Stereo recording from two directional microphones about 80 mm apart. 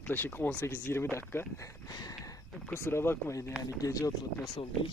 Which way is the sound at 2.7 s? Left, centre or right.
Left.